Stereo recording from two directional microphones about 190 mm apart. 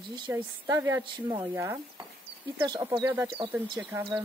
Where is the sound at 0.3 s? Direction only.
15° right (ahead or behind).